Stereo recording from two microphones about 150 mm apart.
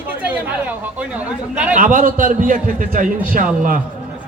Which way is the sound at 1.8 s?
65° right (ahead or behind).